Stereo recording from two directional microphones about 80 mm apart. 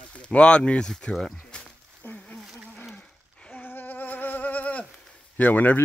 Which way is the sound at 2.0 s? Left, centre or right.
Centre.